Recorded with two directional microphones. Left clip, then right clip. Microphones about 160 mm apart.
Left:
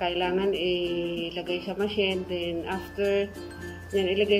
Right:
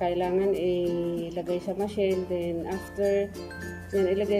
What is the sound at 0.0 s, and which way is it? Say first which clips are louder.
Speech: right 1 dB; 25° right (ahead or behind).